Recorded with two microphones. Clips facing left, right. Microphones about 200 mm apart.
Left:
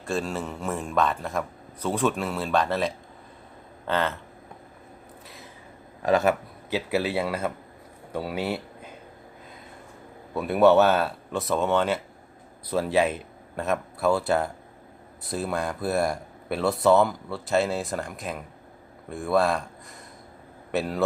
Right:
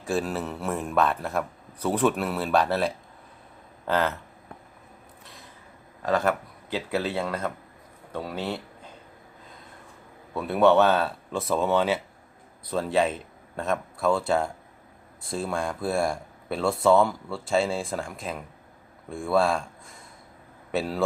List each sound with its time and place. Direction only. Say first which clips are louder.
0.0 s a man's voice: right 1 dB; 5° right (ahead or behind)
6.0 s speech: left 3 dB; 15° left (ahead or behind)
10.4 s a man's voice: left 1 dB; 5° left (ahead or behind)